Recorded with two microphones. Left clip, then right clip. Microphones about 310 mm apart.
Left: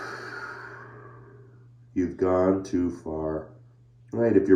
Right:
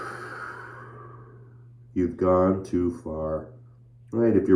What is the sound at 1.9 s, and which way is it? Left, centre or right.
Speech, centre.